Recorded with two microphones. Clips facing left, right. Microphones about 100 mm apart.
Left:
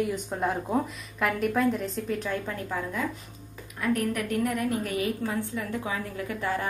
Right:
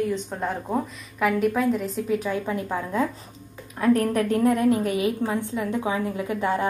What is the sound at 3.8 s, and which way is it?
A woman's voice, 30° right (ahead or behind).